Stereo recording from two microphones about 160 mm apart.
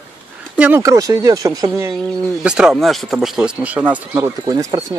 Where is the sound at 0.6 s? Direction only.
15° right (ahead or behind).